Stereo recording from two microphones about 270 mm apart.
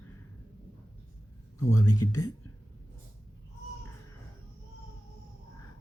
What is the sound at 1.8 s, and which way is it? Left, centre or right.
Speech, left.